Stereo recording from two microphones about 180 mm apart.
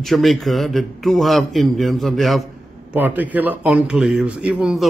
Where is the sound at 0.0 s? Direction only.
Centre (ahead or behind).